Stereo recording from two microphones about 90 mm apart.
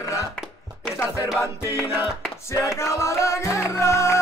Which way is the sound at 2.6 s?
35° left (ahead or behind).